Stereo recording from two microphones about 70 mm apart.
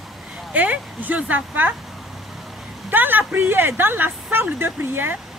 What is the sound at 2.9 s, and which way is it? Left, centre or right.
Speech, right.